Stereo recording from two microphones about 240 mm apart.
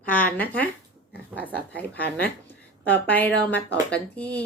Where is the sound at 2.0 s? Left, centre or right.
Left.